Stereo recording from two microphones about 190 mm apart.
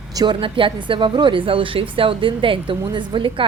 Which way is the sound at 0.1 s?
20° right (ahead or behind).